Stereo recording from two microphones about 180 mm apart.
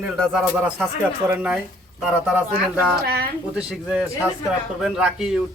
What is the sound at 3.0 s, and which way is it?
Speech, 60° right (ahead or behind).